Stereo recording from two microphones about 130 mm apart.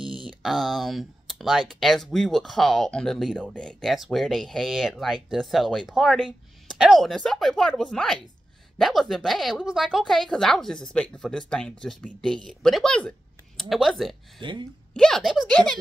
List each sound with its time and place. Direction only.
0.0 s a sound: 40° right (ahead or behind)
0.4 s speech: centre (ahead or behind)
14.4 s speech: 40° right (ahead or behind)
15.0 s speech: 5° left (ahead or behind)